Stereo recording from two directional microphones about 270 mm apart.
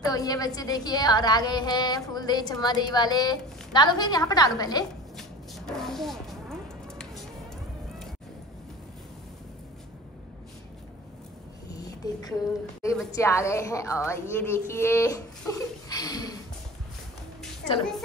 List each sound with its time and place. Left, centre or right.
0.0 s a woman's voice: centre
5.1 s music: centre
11.7 s a sound: centre
12.8 s a woman's voice: centre